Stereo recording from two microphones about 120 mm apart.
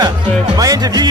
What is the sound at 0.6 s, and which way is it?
Speech, 30° right (ahead or behind).